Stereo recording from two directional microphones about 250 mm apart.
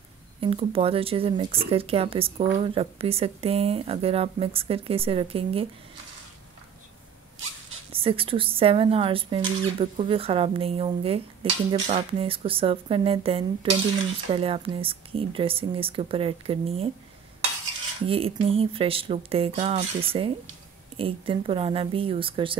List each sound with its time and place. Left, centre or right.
0.4 s speech: right
7.9 s speech: right
18.0 s speech: right